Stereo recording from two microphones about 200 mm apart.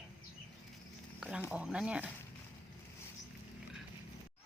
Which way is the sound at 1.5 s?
5° right (ahead or behind).